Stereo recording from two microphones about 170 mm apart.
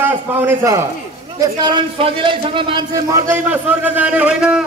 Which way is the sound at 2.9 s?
15° right (ahead or behind).